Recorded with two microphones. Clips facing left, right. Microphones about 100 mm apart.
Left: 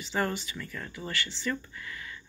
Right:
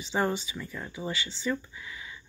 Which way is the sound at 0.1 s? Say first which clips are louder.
Right 2 dB; 15° right (ahead or behind).